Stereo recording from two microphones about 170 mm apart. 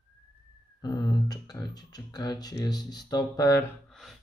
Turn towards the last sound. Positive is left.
turn(degrees=0)  # may be behind; listen again after turning